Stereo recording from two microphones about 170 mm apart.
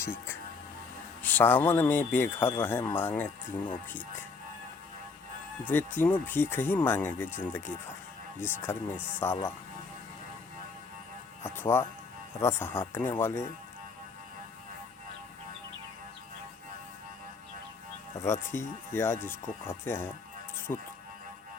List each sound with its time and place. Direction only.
0.0 s speech: 15° left (ahead or behind)
5.6 s speech: 10° left (ahead or behind)
11.4 s speech: 15° left (ahead or behind)
18.2 s speech: 15° left (ahead or behind)